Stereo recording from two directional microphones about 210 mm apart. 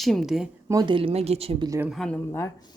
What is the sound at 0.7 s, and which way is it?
Speech, 20° right (ahead or behind).